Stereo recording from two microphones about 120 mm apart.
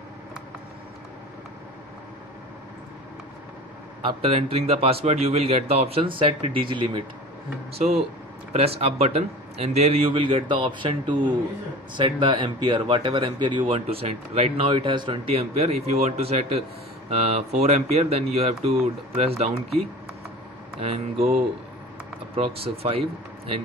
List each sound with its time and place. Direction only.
4.0 s a man's voice: 50° right (ahead or behind)
8.5 s a man's voice: 55° right (ahead or behind)
13.7 s a man's voice: 60° right (ahead or behind); by 15.3 s 40° right (ahead or behind)
15.3 s a man's voice: 60° right (ahead or behind)
20.8 s a man's voice: 60° right (ahead or behind)